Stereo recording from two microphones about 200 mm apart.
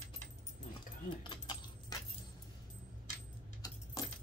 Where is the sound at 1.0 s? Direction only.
20° left (ahead or behind).